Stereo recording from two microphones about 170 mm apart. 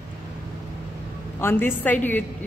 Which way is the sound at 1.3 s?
15° left (ahead or behind).